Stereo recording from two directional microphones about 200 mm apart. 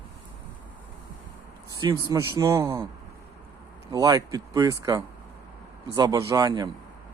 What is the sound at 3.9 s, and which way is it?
Speech, 20° right (ahead or behind).